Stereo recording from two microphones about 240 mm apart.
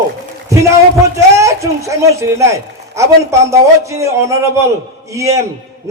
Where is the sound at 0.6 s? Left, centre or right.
Centre.